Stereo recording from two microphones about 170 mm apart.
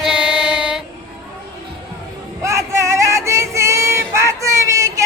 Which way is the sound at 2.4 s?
15° right (ahead or behind).